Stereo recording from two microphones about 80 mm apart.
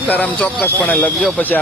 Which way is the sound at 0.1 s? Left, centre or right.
Centre.